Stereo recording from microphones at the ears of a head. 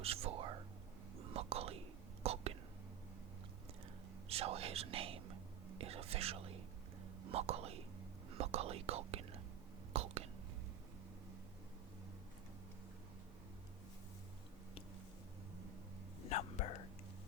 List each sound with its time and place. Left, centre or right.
0.0 s whispering: right
4.3 s whispering: right
16.2 s a sound: left